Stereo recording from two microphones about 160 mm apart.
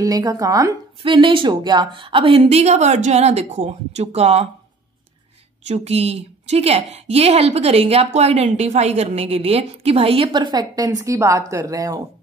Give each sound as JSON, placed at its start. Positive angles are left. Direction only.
{"t": 0.0, "sound": "a woman's voice", "side_deg": -25}
{"t": 5.7, "sound": "a woman's voice", "side_deg": -40}